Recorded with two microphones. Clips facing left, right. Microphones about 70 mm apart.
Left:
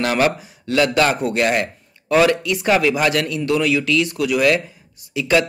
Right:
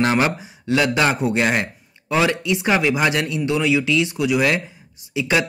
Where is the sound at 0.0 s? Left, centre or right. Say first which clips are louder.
Even; right.